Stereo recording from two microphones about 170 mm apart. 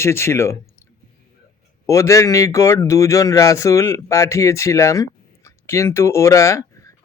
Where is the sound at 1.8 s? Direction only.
20° left (ahead or behind).